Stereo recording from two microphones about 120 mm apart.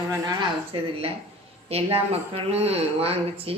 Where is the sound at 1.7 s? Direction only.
55° right (ahead or behind).